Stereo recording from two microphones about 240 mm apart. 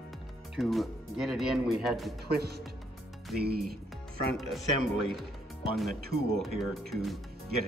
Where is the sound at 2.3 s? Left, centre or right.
Right.